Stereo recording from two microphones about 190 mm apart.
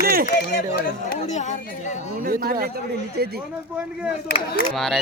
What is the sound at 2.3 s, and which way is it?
Speech, 50° right (ahead or behind).